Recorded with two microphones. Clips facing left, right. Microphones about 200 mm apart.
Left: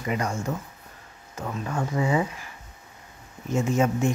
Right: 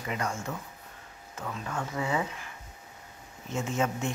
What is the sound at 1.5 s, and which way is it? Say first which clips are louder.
Speech: left 5 dB; 25° left (ahead or behind).